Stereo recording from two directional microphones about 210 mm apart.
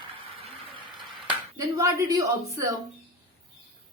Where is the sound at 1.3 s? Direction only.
15° right (ahead or behind).